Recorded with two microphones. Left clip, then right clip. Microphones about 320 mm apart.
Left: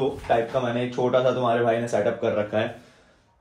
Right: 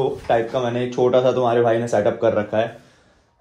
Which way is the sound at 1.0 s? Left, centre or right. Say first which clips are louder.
Right 7 dB; right.